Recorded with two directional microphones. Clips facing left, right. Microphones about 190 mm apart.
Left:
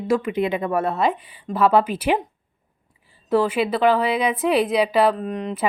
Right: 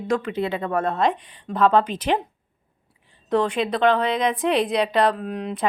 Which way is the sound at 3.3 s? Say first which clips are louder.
Left 2 dB; 5° left (ahead or behind).